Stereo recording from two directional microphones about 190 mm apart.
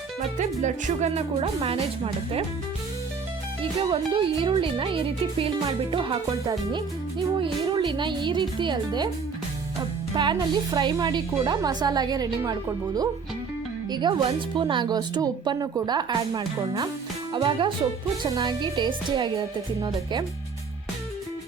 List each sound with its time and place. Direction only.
0.2 s speech: 40° right (ahead or behind)
3.6 s speech: 30° right (ahead or behind)
10.2 s speech: 25° right (ahead or behind)